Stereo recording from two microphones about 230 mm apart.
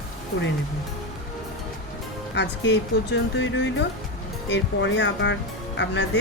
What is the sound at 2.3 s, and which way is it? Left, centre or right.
Speech, left.